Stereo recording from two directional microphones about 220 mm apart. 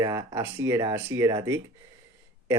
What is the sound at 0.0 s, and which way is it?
Speech, 15° right (ahead or behind).